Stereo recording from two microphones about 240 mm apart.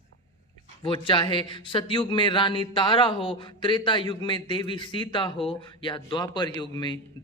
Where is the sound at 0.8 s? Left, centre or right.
Left.